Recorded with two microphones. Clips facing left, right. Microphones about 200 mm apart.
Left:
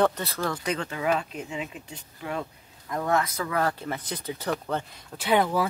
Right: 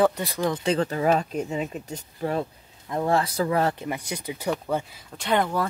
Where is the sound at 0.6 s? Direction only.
30° right (ahead or behind).